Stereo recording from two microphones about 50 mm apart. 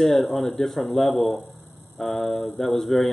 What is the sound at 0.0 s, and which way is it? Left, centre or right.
Speech, centre.